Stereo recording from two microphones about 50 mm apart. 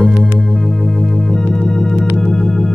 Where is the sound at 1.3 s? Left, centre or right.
Centre.